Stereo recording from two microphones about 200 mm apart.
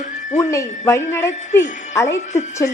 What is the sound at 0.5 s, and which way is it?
A woman's voice, 15° left (ahead or behind).